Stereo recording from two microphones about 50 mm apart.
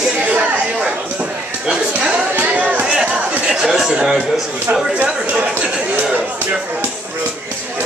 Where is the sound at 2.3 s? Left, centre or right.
Right.